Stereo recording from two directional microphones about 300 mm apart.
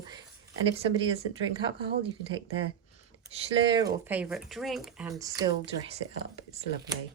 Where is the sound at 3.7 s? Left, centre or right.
Centre.